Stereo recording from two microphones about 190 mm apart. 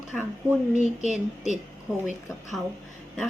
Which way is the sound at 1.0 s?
35° left (ahead or behind).